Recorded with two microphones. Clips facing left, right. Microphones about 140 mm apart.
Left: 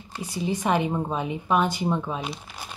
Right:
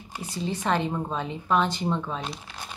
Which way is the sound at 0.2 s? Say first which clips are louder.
Left 3 dB; 15° left (ahead or behind).